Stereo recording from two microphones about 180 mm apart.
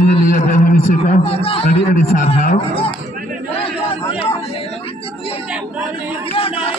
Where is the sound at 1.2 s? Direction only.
30° left (ahead or behind).